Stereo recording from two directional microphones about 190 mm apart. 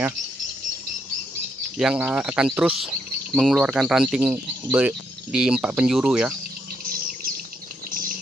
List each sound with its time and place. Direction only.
1.8 s speech: 5° right (ahead or behind)
6.8 s bird: 50° right (ahead or behind)